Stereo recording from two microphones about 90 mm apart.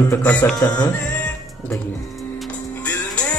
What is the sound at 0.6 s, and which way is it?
Music, 45° left (ahead or behind).